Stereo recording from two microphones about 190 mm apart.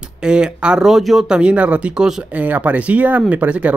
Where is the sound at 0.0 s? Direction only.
5° right (ahead or behind).